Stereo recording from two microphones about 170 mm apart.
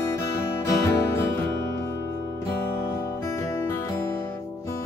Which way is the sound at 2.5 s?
15° left (ahead or behind).